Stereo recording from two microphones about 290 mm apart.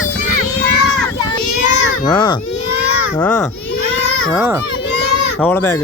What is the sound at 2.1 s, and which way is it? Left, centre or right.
Baby cry, centre.